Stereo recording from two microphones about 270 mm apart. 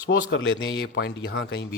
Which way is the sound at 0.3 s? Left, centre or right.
Left.